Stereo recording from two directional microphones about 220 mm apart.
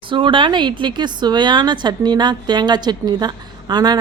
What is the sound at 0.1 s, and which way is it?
A woman's voice, 20° right (ahead or behind).